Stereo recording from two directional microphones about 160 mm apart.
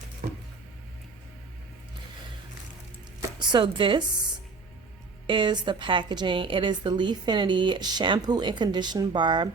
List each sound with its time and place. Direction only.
0.2 s chopping: 65° right (ahead or behind)
3.2 s speech: 30° right (ahead or behind)
5.2 s a woman's voice: 30° right (ahead or behind)